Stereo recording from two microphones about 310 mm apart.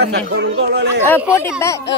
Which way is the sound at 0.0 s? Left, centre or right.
Right.